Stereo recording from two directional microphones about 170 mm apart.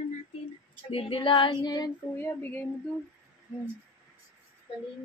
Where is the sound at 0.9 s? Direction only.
35° left (ahead or behind).